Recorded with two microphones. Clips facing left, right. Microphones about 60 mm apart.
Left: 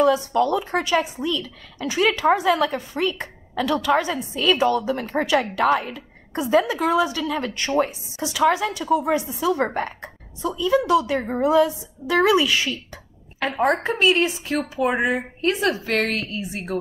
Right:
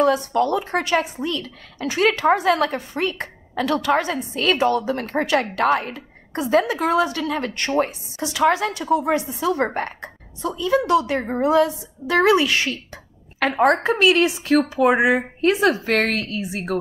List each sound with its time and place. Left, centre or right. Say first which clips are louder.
0.0 s a woman's voice: even; right
4.0 s speech: right 1 dB; right
4.3 s a woman's voice: even; right
13.8 s a woman's voice: right 3 dB; right
14.6 s speech: right 3 dB; right
15.9 s a woman's voice: right 2 dB; right